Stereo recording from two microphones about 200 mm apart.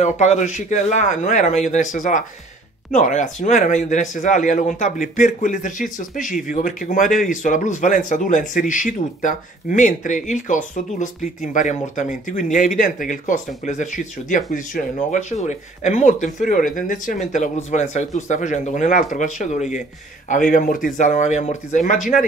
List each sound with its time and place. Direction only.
0.0 s speech: 35° left (ahead or behind)